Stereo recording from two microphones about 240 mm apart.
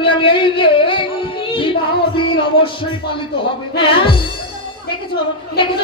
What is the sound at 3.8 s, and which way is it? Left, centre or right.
Speech, left.